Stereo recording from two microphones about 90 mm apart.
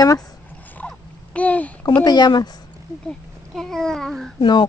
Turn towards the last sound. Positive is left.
turn(degrees=60)  # may be behind; listen again after turning